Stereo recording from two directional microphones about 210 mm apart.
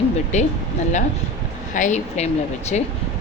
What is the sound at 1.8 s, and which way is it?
Speech, 35° left (ahead or behind).